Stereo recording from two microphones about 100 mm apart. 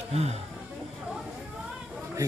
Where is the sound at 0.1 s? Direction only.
90° right.